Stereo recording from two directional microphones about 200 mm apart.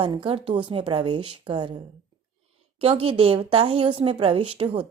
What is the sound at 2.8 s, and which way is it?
Speech, 30° right (ahead or behind).